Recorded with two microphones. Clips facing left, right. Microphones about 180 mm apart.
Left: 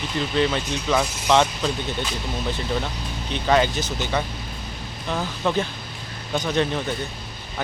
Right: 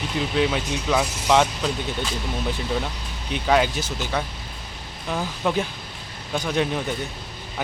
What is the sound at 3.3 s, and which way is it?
Speech, 5° right (ahead or behind).